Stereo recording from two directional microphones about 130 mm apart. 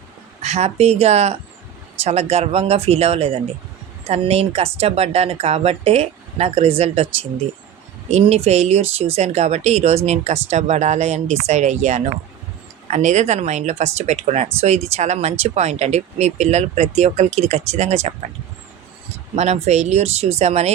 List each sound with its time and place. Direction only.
0.4 s speech: 60° right (ahead or behind)
19.4 s speech: 55° right (ahead or behind)